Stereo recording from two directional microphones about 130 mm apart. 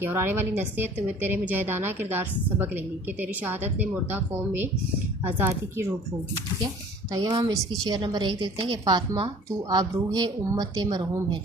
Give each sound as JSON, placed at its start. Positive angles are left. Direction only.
{"t": 0.0, "sound": "a woman's voice", "side_deg": -15}
{"t": 7.1, "sound": "a woman's voice", "side_deg": -35}